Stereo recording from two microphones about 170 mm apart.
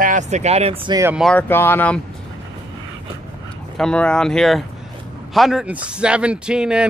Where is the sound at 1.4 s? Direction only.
15° left (ahead or behind).